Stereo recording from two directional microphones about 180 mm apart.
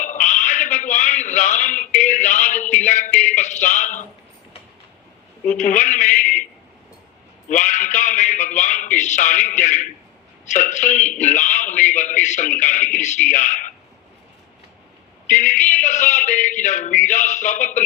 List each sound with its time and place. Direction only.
0.0 s a sound: 45° left (ahead or behind)
2.8 s speech: 45° left (ahead or behind)
5.5 s a man's voice: 45° left (ahead or behind)
7.4 s a man's voice: 45° left (ahead or behind)
15.3 s a man's voice: 45° left (ahead or behind)